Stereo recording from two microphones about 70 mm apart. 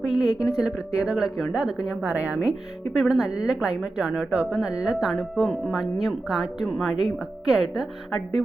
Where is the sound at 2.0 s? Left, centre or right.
Right.